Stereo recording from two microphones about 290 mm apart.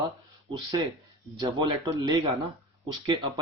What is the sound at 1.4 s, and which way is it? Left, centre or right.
Speech, centre.